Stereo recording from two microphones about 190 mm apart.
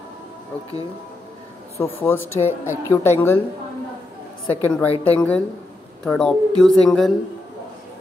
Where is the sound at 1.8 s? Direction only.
10° left (ahead or behind).